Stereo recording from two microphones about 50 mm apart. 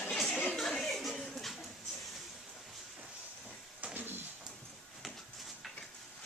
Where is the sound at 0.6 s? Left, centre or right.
Centre.